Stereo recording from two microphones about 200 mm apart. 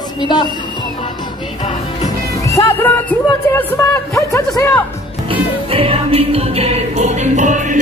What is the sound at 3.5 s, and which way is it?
Speech, 10° left (ahead or behind).